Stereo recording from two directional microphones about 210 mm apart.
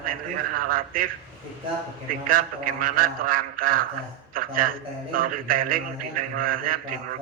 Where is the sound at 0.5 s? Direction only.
45° right (ahead or behind).